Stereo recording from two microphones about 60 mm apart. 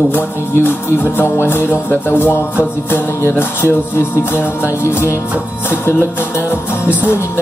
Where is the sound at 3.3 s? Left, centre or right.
Left.